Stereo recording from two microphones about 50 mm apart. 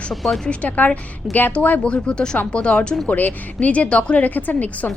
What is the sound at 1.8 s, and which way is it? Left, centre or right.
Speech, centre.